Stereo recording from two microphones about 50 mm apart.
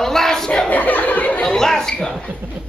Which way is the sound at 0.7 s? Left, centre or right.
Left.